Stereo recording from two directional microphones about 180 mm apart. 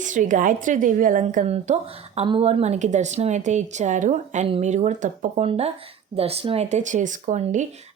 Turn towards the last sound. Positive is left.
turn(degrees=-40)  # may be behind; listen again after turning